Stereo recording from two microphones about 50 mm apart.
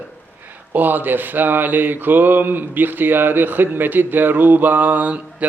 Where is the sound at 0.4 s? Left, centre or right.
Right.